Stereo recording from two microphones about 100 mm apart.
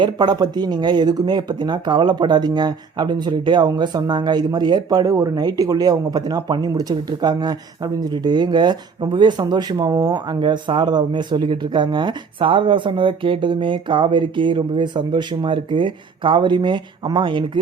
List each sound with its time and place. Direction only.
0.0 s speech: 45° right (ahead or behind)